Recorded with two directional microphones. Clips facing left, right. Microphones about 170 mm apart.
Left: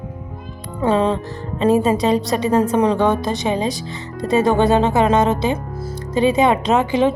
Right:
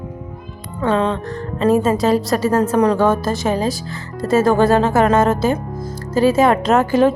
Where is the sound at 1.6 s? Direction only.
30° left (ahead or behind).